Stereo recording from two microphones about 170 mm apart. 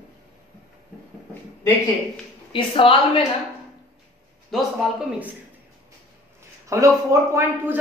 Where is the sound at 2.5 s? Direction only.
30° left (ahead or behind).